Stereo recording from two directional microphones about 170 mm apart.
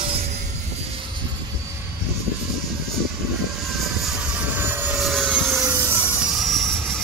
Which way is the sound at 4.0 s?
5° right (ahead or behind).